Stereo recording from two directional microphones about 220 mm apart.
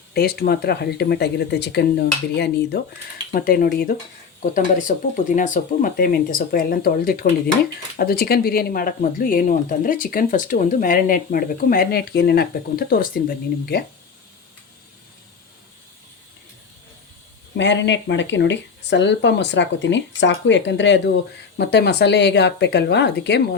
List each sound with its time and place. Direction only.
0.1 s speech: 45° left (ahead or behind)
17.6 s speech: 55° left (ahead or behind)